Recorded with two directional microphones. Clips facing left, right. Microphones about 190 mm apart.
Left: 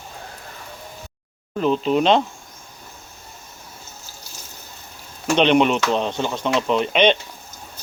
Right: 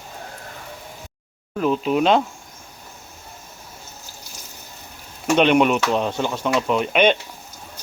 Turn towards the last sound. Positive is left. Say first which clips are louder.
# even
turn(degrees=-5)  # may be behind; listen again after turning